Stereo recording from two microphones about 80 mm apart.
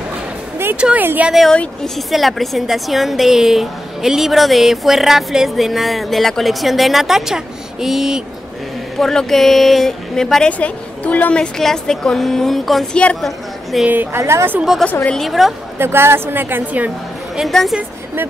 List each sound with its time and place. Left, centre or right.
0.7 s a woman's voice: centre
2.0 s a woman's voice: centre
10.6 s a woman's voice: centre
11.5 s a woman's voice: centre
12.9 s speech: centre
13.2 s a sound: centre
14.1 s a woman's voice: right
15.0 s a woman's voice: centre
15.8 s a woman's voice: right
17.4 s a woman's voice: centre